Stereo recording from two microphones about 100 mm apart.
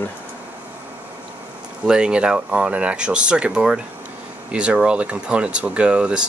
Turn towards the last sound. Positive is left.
turn(degrees=-10)  # may be behind; listen again after turning